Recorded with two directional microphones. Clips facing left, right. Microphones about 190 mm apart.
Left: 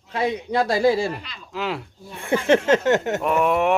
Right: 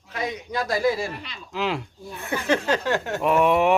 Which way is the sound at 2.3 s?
25° left (ahead or behind).